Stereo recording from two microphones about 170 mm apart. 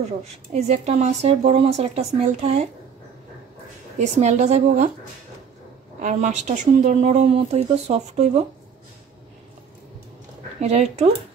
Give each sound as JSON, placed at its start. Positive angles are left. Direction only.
{"t": 0.0, "sound": "speech", "side_deg": -40}
{"t": 4.0, "sound": "speech", "side_deg": -40}
{"t": 5.9, "sound": "speech", "side_deg": -45}
{"t": 10.6, "sound": "speech", "side_deg": -40}